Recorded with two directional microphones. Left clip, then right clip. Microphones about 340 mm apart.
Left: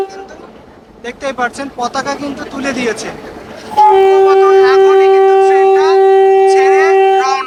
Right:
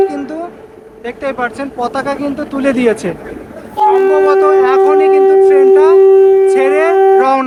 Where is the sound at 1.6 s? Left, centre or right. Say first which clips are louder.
Right 1 dB; centre.